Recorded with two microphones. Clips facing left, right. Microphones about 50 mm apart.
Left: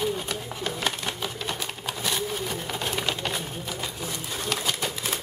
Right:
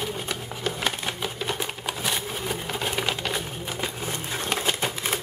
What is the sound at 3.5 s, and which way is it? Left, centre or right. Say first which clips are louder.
Typewriter: right 2 dB; right.